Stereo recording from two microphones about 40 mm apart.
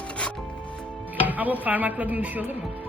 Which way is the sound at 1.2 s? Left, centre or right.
Right.